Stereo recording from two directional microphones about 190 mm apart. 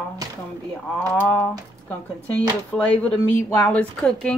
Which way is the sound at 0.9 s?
10° left (ahead or behind).